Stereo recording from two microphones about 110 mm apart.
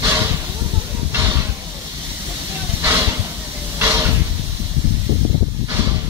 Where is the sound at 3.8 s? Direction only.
25° right (ahead or behind).